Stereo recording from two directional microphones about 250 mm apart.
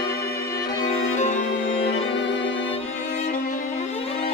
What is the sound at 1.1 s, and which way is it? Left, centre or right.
Music, left.